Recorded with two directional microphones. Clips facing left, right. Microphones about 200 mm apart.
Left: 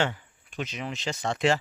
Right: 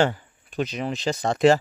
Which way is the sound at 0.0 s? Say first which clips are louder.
Right 6 dB; 40° right (ahead or behind).